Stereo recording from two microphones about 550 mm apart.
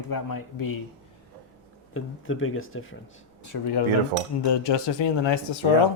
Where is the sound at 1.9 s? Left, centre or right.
Left.